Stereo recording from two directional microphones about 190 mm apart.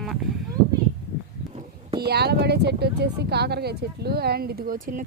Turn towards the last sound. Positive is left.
turn(degrees=-45)  # may be behind; listen again after turning